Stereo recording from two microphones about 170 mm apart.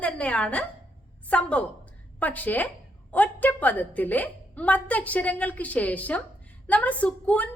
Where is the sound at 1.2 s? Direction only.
10° left (ahead or behind).